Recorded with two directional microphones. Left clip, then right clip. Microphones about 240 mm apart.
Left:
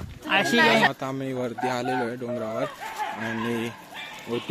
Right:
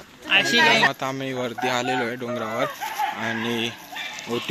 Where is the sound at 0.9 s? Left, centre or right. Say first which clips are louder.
Right 3 dB; centre.